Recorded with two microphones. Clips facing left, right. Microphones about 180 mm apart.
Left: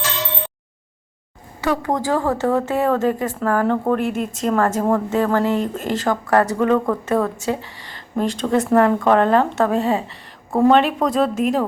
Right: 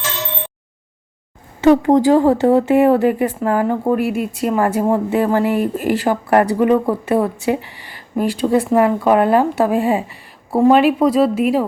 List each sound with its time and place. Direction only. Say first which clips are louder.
1.6 s speech: right 10 dB; 20° right (ahead or behind); by 11.3 s 5° right (ahead or behind)